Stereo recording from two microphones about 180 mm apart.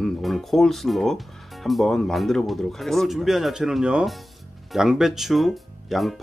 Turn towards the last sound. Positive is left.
turn(degrees=0)  # may be behind; listen again after turning